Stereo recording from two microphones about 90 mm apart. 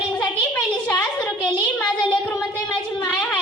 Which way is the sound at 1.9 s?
60° left (ahead or behind).